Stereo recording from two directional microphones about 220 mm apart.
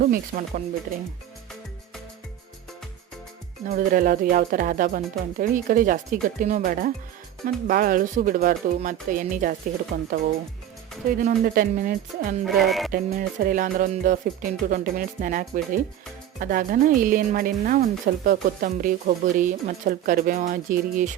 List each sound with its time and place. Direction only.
0.0 s speech: 40° right (ahead or behind)
3.7 s speech: 40° right (ahead or behind)
11.3 s speech: 40° right (ahead or behind)
12.5 s music: centre (ahead or behind)
12.9 s speech: 40° right (ahead or behind)